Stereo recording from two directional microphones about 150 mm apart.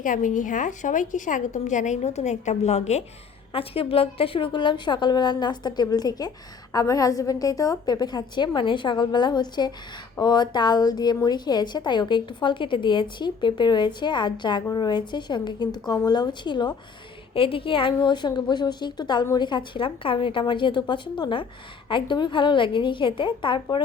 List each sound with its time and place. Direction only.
0.0 s a woman's voice: 60° left (ahead or behind); by 23.8 s 35° left (ahead or behind)